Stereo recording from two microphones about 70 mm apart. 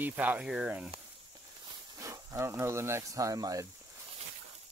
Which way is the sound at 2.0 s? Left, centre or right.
Right.